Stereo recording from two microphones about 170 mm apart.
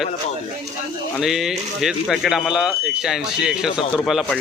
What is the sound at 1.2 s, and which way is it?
Speech, centre (ahead or behind).